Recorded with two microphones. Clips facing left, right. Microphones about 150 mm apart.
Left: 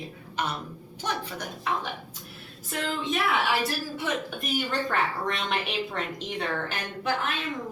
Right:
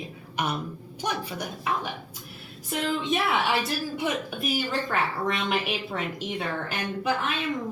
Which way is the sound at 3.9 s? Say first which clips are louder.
Right 2 dB; 5° right (ahead or behind).